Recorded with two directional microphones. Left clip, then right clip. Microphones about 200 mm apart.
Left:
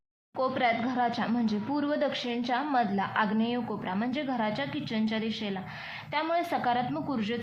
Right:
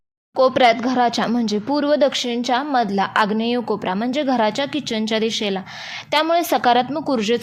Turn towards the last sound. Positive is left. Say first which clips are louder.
# right 13 dB
turn(degrees=-45)  # may be behind; listen again after turning